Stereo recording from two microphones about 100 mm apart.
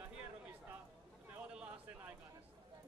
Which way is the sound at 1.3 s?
15° right (ahead or behind).